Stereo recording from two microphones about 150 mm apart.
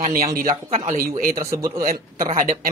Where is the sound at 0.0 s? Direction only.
65° right (ahead or behind).